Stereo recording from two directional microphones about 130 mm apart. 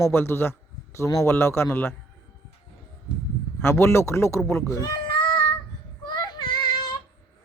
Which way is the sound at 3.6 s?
20° left (ahead or behind).